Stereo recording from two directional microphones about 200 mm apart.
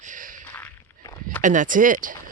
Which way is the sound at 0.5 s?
10° left (ahead or behind).